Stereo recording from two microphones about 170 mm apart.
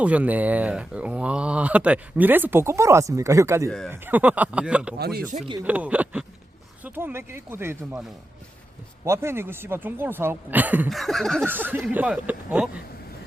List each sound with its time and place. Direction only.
0.0 s speech: 10° right (ahead or behind)
4.9 s speech: 70° right (ahead or behind)
5.6 s speech: 10° right (ahead or behind)
9.0 s speech: 15° right (ahead or behind)
10.8 s a sound: centre (ahead or behind)
11.4 s speech: 10° right (ahead or behind)